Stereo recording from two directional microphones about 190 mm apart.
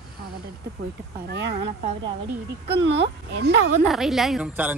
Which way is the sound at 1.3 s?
60° right (ahead or behind).